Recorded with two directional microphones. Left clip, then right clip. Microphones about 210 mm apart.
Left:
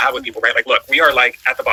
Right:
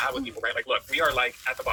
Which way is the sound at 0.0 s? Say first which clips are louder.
Left 12 dB; 45° left (ahead or behind).